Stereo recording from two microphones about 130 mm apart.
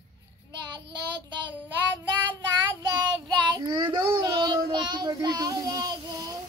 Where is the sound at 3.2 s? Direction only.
30° right (ahead or behind).